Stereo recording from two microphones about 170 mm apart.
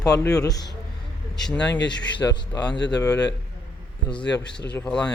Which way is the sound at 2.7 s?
90° left.